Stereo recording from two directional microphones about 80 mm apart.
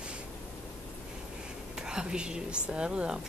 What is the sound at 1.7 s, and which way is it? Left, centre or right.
A woman's voice, centre.